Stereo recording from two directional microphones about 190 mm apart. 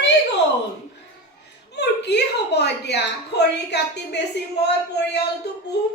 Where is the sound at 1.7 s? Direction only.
65° left (ahead or behind).